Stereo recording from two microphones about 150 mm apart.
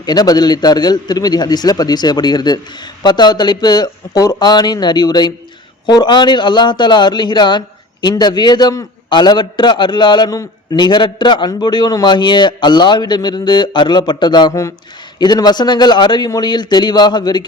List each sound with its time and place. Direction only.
0.0 s a man's voice: 25° left (ahead or behind)